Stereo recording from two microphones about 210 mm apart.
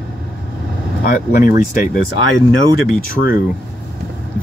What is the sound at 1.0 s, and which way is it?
Speech, 45° left (ahead or behind).